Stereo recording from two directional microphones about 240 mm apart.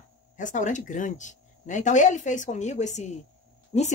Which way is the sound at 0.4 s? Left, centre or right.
Left.